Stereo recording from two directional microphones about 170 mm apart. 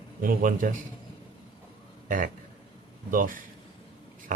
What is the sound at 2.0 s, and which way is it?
A man's voice, 50° right (ahead or behind).